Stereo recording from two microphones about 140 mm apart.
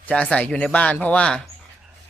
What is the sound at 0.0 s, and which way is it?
Speech, 5° left (ahead or behind).